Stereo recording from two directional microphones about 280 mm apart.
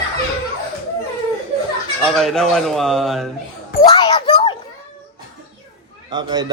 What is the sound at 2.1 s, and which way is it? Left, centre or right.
A man's voice, centre.